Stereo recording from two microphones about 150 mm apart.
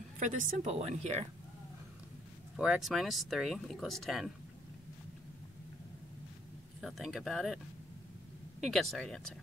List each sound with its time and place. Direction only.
0.2 s a woman's voice: 60° right (ahead or behind)
2.5 s speech: 5° right (ahead or behind)
6.8 s speech: centre (ahead or behind)